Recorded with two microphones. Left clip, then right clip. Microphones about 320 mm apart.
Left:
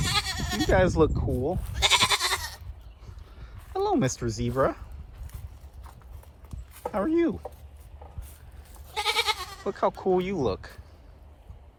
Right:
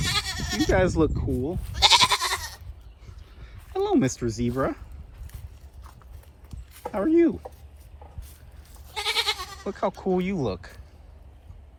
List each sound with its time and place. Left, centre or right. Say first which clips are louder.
0.0 s bleat: right 1 dB; centre
1.7 s goat: right 5 dB; centre
3.4 s speech: right 1 dB; centre
6.9 s speech: right 4 dB; centre
8.9 s goat: even; right
9.6 s speech: left 2 dB; centre